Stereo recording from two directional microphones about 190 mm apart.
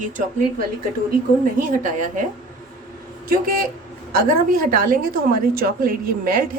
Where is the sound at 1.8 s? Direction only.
45° right (ahead or behind).